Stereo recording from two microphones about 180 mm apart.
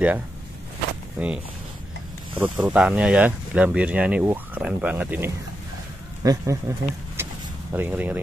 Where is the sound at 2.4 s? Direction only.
10° right (ahead or behind).